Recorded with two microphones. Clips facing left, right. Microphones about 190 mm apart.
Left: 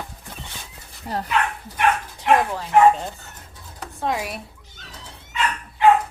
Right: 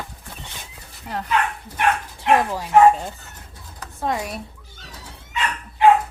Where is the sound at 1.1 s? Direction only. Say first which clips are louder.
Left 2 dB; 35° left (ahead or behind).